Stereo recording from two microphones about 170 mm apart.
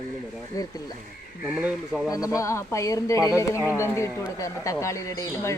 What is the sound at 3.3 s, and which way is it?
Speech, 15° left (ahead or behind).